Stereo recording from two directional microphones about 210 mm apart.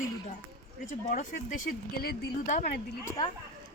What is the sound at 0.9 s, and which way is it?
Speech, 40° left (ahead or behind).